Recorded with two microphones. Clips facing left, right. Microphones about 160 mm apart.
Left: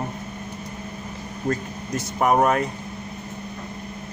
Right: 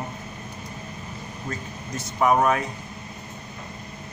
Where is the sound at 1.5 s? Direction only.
55° left (ahead or behind).